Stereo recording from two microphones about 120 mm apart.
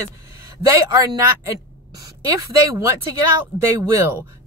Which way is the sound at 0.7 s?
30° right (ahead or behind).